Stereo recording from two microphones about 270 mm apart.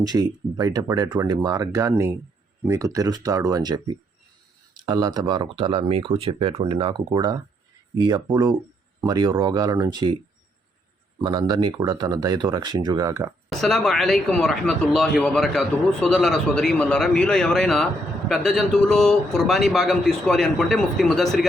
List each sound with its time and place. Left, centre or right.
0.0 s speech: centre
11.2 s speech: centre
13.5 s speech: centre